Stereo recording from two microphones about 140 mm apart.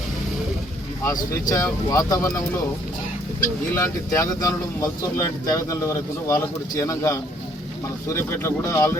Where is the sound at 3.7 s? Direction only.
20° left (ahead or behind).